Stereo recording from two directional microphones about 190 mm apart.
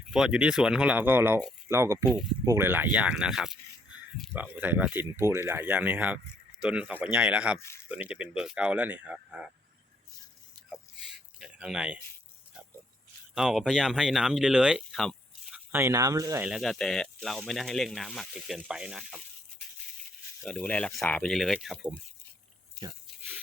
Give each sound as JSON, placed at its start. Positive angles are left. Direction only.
{"t": 0.1, "sound": "speech", "side_deg": -5}
{"t": 11.3, "sound": "speech", "side_deg": -5}
{"t": 13.3, "sound": "speech", "side_deg": 0}
{"t": 16.5, "sound": "speech", "side_deg": 0}
{"t": 20.4, "sound": "speech", "side_deg": 5}